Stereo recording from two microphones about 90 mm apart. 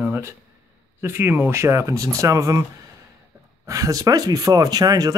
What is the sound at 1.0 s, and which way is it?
Speech, 25° right (ahead or behind).